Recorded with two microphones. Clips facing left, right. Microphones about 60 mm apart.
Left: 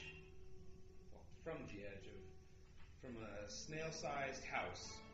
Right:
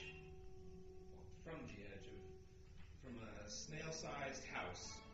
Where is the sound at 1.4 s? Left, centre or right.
Left.